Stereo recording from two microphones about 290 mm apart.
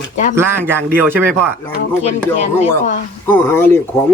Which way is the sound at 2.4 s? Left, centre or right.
Left.